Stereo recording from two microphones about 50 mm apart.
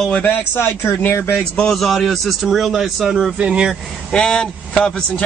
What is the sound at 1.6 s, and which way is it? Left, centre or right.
A man's voice, centre.